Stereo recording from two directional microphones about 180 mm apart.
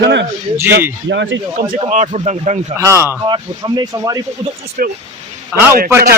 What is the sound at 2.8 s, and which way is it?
A man's voice, 15° right (ahead or behind).